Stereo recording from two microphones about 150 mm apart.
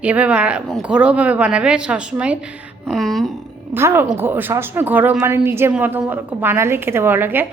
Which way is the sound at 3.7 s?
15° right (ahead or behind).